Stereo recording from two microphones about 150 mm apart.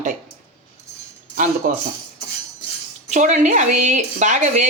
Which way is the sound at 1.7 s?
60° right (ahead or behind).